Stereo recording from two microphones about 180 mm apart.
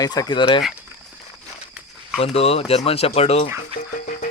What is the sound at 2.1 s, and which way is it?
Speech, 35° left (ahead or behind).